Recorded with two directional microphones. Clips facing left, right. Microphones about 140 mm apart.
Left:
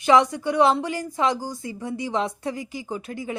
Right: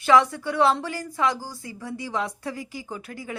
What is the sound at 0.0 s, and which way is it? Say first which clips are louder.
A woman's voice: left 1 dB; 20° left (ahead or behind).